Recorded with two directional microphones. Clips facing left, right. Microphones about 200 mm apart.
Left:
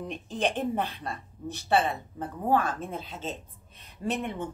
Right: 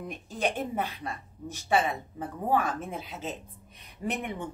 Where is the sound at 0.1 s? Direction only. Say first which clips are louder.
Left 1 dB; 10° right (ahead or behind).